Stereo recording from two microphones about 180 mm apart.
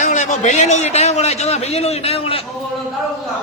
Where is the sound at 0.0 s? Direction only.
40° left (ahead or behind).